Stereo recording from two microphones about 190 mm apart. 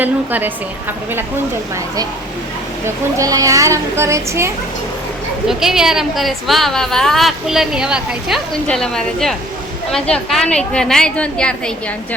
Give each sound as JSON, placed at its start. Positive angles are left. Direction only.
{"t": 0.0, "sound": "a child's voice", "side_deg": -10}
{"t": 2.8, "sound": "a child's voice", "side_deg": -20}
{"t": 5.5, "sound": "a woman's voice", "side_deg": 0}